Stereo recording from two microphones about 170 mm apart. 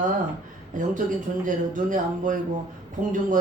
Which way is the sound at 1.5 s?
50° right (ahead or behind).